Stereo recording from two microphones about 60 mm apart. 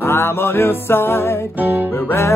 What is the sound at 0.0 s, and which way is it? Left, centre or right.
Music, left.